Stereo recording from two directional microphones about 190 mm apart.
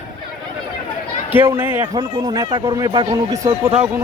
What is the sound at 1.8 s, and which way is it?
Speech, 20° right (ahead or behind).